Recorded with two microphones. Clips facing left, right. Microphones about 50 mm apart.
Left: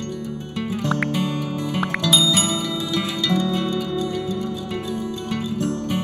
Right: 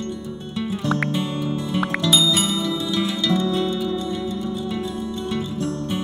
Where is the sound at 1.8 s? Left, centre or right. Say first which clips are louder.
Even; centre.